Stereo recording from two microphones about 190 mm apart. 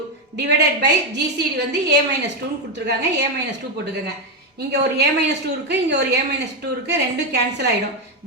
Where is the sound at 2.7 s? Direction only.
65° right (ahead or behind).